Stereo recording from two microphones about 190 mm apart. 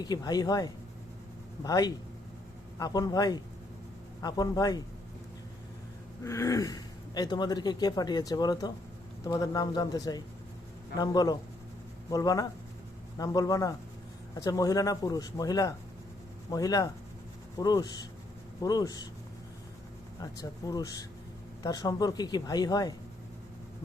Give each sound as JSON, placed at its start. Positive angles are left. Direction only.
{"t": 0.0, "sound": "speech", "side_deg": 20}
{"t": 6.2, "sound": "speech", "side_deg": 15}
{"t": 20.1, "sound": "speech", "side_deg": 20}